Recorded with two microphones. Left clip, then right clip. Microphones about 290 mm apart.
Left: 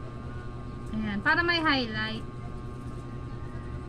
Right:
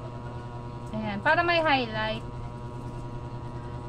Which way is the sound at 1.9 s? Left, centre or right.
Right.